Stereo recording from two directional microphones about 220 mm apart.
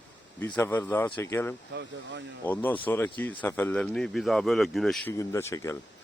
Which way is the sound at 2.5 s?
10° left (ahead or behind).